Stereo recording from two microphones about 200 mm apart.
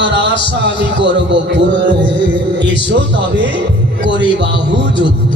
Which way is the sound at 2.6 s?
60° right (ahead or behind).